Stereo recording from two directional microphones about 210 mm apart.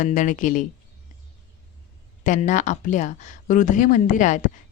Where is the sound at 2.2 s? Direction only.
35° left (ahead or behind).